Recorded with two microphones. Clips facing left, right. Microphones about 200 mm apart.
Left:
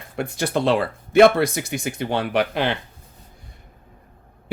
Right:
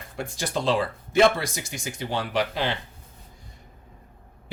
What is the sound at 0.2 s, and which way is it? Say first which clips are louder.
Speech: left 6 dB; 60° left (ahead or behind).